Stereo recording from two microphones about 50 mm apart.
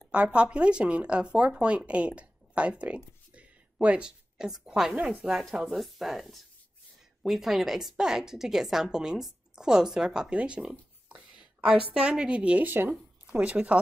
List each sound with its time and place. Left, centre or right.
0.1 s speech: right
3.3 s a sound: right
4.0 s speech: centre
5.0 s speech: right
5.5 s a woman's voice: centre; by 12.6 s right
12.6 s speech: right
13.4 s speech: right